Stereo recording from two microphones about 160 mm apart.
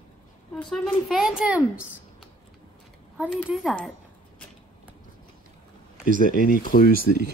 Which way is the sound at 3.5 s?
Centre (ahead or behind).